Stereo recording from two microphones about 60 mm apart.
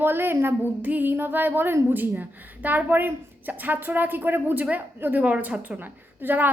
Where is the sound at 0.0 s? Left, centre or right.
Right.